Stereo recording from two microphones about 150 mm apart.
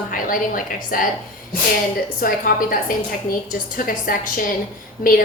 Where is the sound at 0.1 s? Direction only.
65° left (ahead or behind).